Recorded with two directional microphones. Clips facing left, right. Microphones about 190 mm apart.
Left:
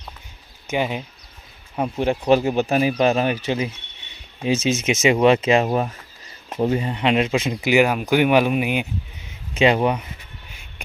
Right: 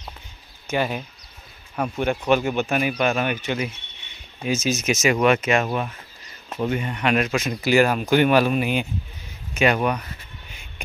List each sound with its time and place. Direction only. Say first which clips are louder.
0.7 s speech: left 1 dB; 20° left (ahead or behind)
1.8 s speech: left 2 dB; 30° left (ahead or behind)
7.7 s speech: even; 10° left (ahead or behind)
9.6 s speech: left 3 dB; 25° left (ahead or behind)